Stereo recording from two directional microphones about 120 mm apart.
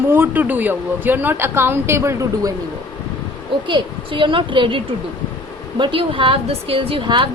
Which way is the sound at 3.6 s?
45° right (ahead or behind).